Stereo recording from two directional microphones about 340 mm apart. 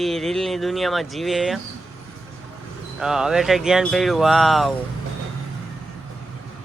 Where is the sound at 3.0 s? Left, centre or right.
Centre.